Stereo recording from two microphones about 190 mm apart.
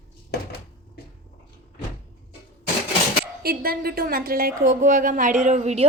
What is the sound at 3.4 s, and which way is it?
A woman's voice, 50° right (ahead or behind).